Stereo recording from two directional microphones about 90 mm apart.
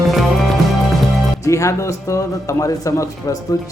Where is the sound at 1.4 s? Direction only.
35° left (ahead or behind).